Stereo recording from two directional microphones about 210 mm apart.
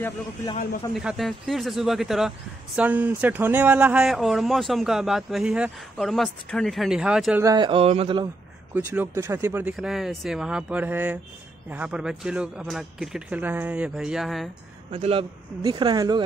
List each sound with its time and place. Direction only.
0.9 s speech: centre (ahead or behind)
7.4 s speech: 20° right (ahead or behind)
8.7 s speech: 10° right (ahead or behind)
14.9 s speech: 30° right (ahead or behind)